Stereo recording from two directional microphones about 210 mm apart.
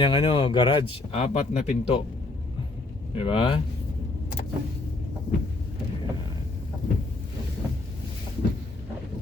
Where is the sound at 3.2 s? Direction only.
25° left (ahead or behind).